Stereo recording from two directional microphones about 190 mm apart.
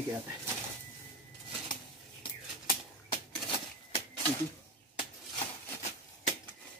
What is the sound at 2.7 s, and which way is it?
Typewriter, 30° left (ahead or behind).